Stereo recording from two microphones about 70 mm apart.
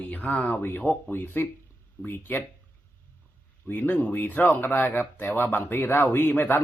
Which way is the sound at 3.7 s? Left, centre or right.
Left.